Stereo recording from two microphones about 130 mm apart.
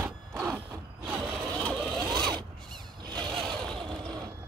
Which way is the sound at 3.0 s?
35° right (ahead or behind).